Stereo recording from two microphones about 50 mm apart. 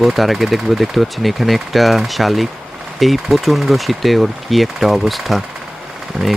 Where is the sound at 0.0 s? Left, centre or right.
Centre.